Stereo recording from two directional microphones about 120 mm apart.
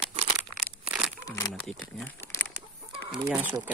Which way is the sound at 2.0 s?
15° left (ahead or behind).